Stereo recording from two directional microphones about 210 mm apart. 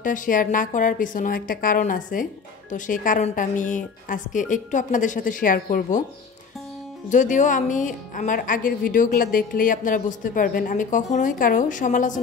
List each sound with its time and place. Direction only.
0.0 s speech: 40° left (ahead or behind)
7.1 s speech: 35° left (ahead or behind)